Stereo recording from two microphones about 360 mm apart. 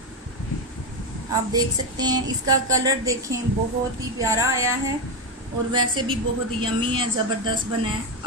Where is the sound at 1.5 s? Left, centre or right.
Centre.